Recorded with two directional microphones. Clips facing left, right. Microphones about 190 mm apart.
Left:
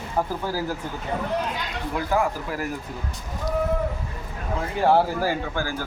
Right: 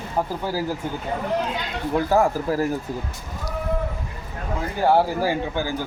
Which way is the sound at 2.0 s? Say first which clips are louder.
Right 4 dB; 40° right (ahead or behind).